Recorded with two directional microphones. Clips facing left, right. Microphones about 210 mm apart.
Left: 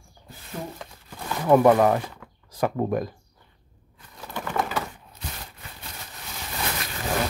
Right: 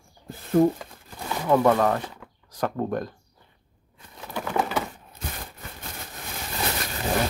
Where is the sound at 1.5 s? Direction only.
15° left (ahead or behind).